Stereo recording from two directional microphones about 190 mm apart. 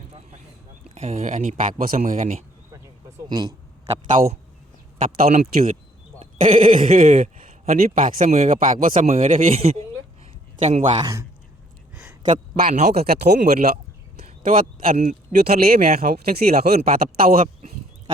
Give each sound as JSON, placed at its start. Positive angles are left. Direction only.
{"t": 0.9, "sound": "speech", "side_deg": -35}
{"t": 3.2, "sound": "a man's voice", "side_deg": -25}
{"t": 10.9, "sound": "a man's voice", "side_deg": -20}
{"t": 12.2, "sound": "speech", "side_deg": -45}
{"t": 12.9, "sound": "speech", "side_deg": -55}
{"t": 14.4, "sound": "speech", "side_deg": -45}
{"t": 15.3, "sound": "speech", "side_deg": -55}